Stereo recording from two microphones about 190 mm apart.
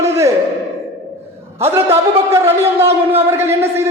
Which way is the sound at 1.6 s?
15° right (ahead or behind).